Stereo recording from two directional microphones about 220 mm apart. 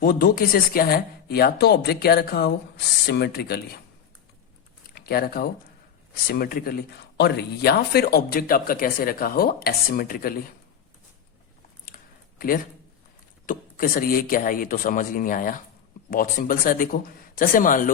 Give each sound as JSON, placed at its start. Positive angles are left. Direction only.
{"t": 0.0, "sound": "speech", "side_deg": 40}
{"t": 4.9, "sound": "speech", "side_deg": 45}
{"t": 11.9, "sound": "a sound", "side_deg": 40}
{"t": 13.5, "sound": "speech", "side_deg": 40}